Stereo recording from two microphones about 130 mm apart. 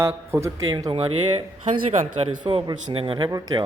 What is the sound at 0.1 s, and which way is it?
Speech, 20° right (ahead or behind).